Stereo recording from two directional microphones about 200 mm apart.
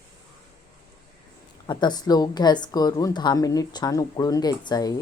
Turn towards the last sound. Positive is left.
turn(degrees=20)  # may be behind; listen again after turning